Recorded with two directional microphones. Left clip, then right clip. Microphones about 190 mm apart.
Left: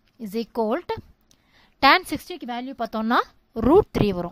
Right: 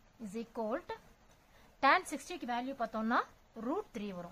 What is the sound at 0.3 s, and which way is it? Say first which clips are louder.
A woman's voice: left 14 dB; 45° left (ahead or behind).